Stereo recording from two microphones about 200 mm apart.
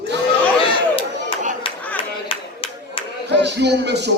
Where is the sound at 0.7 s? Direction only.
25° left (ahead or behind).